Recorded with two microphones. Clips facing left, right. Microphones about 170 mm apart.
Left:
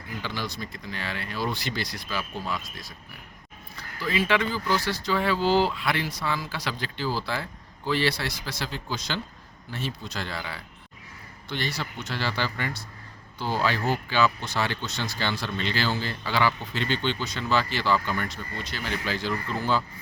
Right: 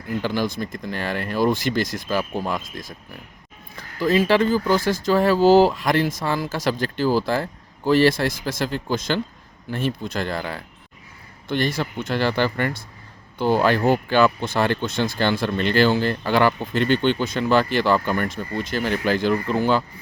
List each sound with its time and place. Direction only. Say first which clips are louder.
0.2 s speech: right 9 dB; 45° right (ahead or behind); by 19.8 s 65° right (ahead or behind)